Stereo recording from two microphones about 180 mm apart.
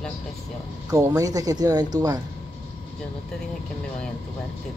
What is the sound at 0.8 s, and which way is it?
Speech, 15° right (ahead or behind).